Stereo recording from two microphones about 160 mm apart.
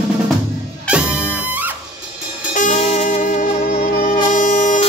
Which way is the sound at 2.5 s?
45° left (ahead or behind).